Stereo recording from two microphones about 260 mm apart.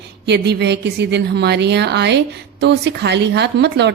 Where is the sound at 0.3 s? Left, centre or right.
Right.